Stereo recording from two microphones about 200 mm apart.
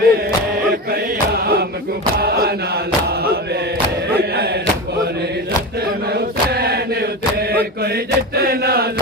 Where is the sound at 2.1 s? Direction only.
50° right (ahead or behind).